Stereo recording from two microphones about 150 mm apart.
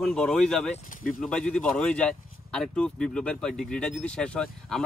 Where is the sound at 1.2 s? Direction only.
5° left (ahead or behind).